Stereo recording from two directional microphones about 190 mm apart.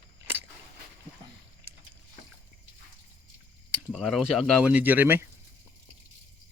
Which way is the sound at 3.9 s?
Centre (ahead or behind).